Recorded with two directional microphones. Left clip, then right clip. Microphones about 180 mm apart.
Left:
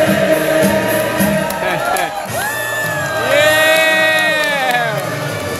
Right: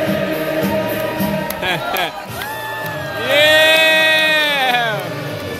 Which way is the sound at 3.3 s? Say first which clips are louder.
Right 1 dB; 25° right (ahead or behind).